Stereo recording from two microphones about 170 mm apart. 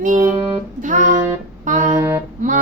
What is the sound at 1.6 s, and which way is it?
Music, 45° right (ahead or behind).